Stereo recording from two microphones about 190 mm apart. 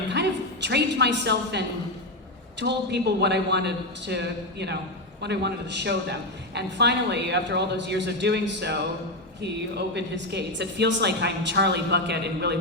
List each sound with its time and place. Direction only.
0.1 s a woman's voice: 65° right (ahead or behind)